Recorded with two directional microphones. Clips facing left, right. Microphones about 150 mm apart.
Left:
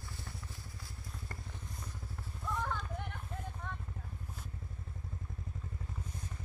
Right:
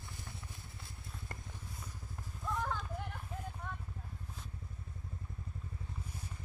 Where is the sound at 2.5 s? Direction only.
5° right (ahead or behind).